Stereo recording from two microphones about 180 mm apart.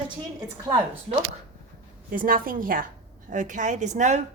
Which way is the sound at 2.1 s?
50° right (ahead or behind).